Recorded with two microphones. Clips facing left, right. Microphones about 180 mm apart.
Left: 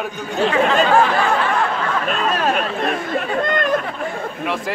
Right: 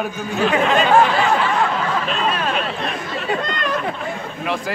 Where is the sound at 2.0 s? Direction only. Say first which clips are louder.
Left 2 dB; 45° left (ahead or behind).